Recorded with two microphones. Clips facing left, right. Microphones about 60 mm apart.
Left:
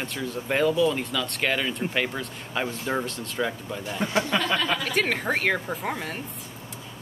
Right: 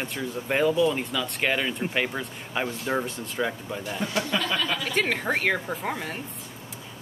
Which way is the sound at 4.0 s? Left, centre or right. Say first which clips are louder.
Left 3 dB; left.